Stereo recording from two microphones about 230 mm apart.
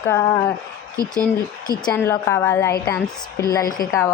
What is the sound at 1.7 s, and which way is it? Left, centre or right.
Speech, centre.